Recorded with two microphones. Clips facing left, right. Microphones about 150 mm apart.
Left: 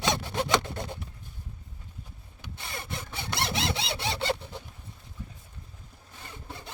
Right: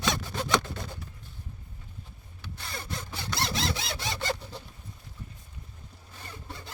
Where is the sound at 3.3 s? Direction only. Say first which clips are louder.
Left 1 dB; 20° left (ahead or behind).